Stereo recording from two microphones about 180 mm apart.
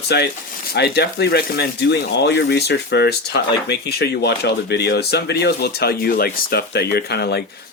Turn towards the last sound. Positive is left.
turn(degrees=65)  # may be behind; listen again after turning